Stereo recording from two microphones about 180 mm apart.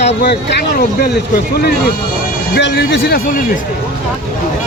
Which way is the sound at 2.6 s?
80° left.